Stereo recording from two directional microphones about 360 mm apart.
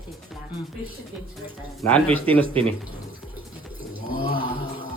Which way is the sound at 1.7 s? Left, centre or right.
Centre.